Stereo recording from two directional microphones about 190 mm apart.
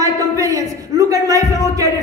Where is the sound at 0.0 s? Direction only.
20° right (ahead or behind).